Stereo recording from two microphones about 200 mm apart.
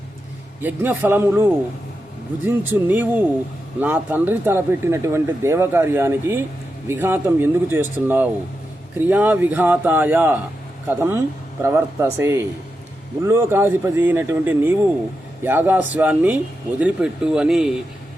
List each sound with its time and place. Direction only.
0.6 s speech: 10° right (ahead or behind)